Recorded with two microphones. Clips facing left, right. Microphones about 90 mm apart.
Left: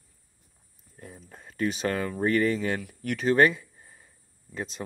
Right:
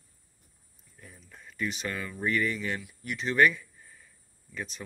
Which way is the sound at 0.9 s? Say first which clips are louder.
Left 6 dB; 40° left (ahead or behind).